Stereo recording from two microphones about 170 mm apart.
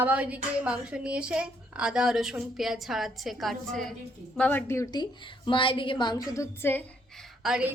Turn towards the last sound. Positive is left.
turn(degrees=-5)  # may be behind; listen again after turning